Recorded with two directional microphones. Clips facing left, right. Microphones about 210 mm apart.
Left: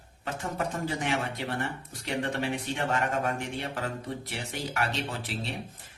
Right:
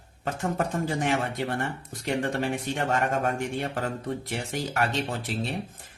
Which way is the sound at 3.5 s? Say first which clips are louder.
Right 4 dB; 45° right (ahead or behind).